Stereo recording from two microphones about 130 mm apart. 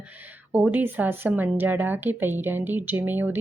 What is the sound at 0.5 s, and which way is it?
A woman's voice, 15° right (ahead or behind).